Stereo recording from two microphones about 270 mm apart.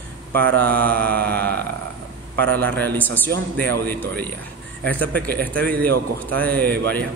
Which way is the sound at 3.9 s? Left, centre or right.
Centre.